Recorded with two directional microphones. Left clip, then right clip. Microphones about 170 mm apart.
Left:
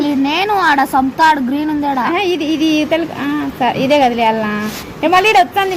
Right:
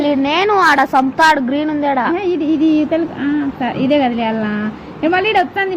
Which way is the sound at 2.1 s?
40° left (ahead or behind).